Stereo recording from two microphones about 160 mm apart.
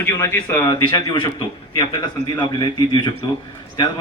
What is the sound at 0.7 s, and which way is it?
A man's voice, 25° left (ahead or behind).